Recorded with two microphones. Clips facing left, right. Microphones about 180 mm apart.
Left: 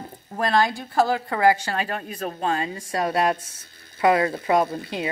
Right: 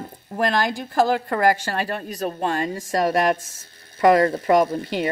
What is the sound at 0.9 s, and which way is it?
Speech, 50° right (ahead or behind).